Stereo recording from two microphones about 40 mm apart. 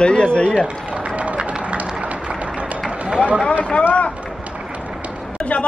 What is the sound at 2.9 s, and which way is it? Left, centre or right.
Run, right.